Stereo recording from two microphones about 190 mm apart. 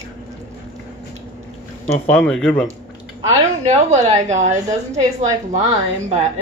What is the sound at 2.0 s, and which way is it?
Speech, 5° left (ahead or behind).